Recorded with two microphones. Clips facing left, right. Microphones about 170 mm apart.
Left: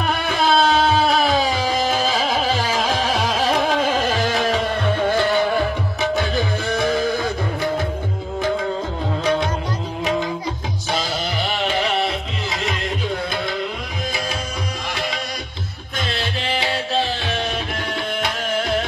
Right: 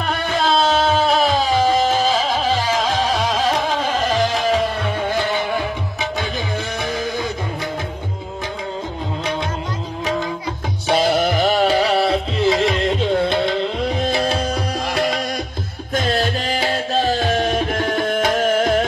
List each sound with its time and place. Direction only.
0.4 s a sound: 10° left (ahead or behind)
4.3 s music: centre (ahead or behind)
10.9 s music: 60° right (ahead or behind); by 13.6 s 25° right (ahead or behind)
14.1 s tabla: 60° right (ahead or behind)
16.0 s music: 45° right (ahead or behind)